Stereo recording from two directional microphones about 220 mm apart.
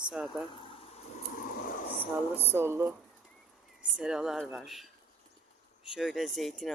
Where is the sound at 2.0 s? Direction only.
10° right (ahead or behind).